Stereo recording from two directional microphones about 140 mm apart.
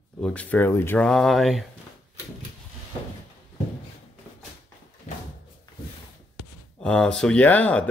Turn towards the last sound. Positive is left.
turn(degrees=10)  # may be behind; listen again after turning